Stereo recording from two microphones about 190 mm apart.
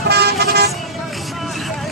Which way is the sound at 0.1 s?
55° right (ahead or behind).